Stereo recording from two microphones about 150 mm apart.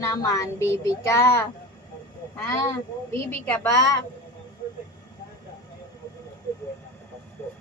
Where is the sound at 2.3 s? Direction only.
20° left (ahead or behind).